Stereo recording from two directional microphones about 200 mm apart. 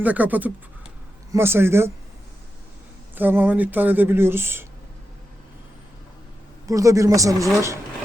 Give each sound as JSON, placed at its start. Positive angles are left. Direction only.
{"t": 0.0, "sound": "speech", "side_deg": -10}
{"t": 3.2, "sound": "speech", "side_deg": -10}
{"t": 6.7, "sound": "speech", "side_deg": -15}